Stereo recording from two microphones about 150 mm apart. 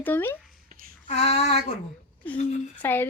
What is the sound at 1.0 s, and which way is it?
Female singing, 45° left (ahead or behind).